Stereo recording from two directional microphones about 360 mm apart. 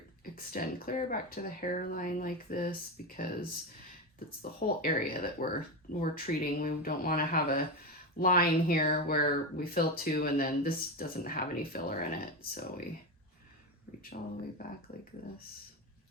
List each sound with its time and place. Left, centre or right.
0.3 s speech: left
4.8 s speech: left
14.6 s speech: left